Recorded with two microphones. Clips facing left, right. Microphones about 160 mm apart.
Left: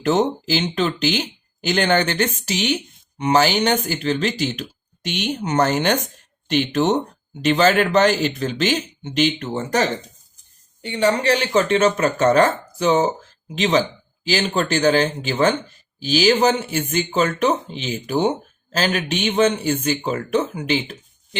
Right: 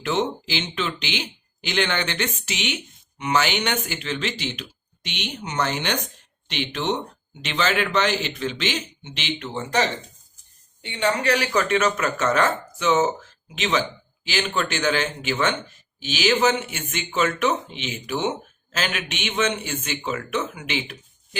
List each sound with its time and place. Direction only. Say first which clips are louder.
0.0 s speech: left 6 dB; 40° left (ahead or behind)
10.8 s speech: left 4 dB; 35° left (ahead or behind)